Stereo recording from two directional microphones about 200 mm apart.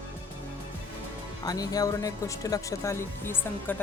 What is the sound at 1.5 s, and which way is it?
Speech, 20° left (ahead or behind).